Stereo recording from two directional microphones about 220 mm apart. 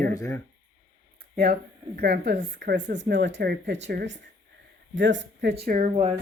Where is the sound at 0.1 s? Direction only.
15° left (ahead or behind).